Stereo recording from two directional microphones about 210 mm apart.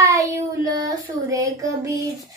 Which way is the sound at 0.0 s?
15° right (ahead or behind).